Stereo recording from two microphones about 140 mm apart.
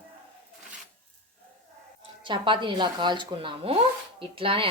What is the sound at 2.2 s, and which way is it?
Speech, 35° right (ahead or behind).